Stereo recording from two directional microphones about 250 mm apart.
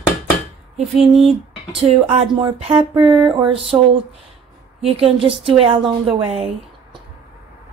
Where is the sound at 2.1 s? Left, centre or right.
Centre.